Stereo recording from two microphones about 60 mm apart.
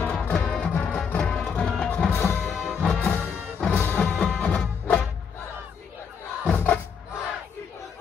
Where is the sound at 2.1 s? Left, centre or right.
Left.